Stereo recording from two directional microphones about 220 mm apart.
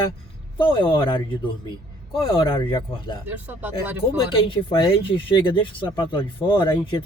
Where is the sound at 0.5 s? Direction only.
25° left (ahead or behind).